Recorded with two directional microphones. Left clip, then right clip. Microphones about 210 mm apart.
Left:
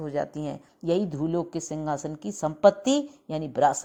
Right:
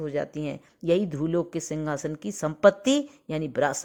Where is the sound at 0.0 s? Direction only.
20° right (ahead or behind).